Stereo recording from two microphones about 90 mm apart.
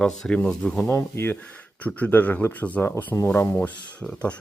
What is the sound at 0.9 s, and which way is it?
Speech, 25° left (ahead or behind).